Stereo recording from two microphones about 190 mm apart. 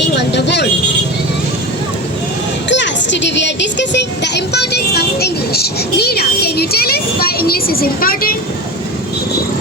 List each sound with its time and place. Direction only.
0.2 s speech: 65° left (ahead or behind)
2.6 s speech: 70° left (ahead or behind); by 8.4 s 50° left (ahead or behind)